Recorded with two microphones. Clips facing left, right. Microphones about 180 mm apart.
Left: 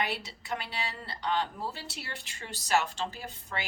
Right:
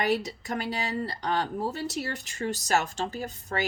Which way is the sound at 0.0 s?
40° right (ahead or behind).